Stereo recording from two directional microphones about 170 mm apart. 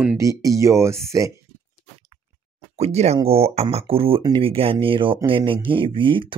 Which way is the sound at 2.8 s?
40° right (ahead or behind).